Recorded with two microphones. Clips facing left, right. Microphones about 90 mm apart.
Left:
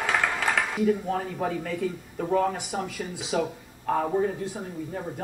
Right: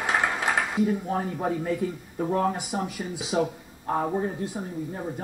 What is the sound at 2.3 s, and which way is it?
Speech, 15° right (ahead or behind).